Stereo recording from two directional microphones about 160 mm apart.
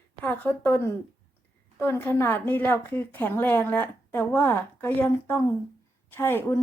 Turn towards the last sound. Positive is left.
turn(degrees=15)  # may be behind; listen again after turning